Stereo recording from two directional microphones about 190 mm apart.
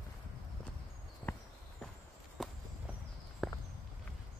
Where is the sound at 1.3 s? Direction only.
10° left (ahead or behind).